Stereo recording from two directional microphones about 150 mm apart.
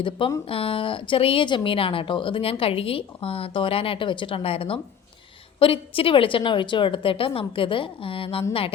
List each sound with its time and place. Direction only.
0.2 s speech: 35° left (ahead or behind)